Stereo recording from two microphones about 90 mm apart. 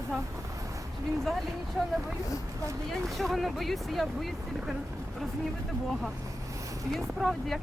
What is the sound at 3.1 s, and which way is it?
Speech, centre (ahead or behind).